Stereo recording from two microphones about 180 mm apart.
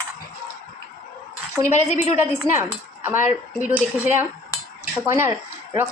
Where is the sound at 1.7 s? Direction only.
40° left (ahead or behind).